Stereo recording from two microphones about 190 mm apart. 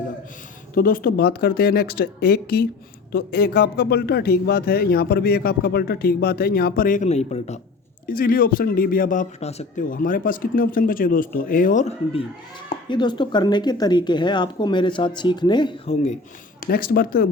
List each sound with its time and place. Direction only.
0.8 s a man's voice: 50° left (ahead or behind)
8.0 s a man's voice: 50° left (ahead or behind)
12.9 s speech: 25° left (ahead or behind)
16.6 s a man's voice: 50° left (ahead or behind)